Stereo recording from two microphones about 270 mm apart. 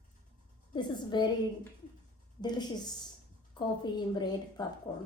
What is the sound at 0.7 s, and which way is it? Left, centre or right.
Speech, centre.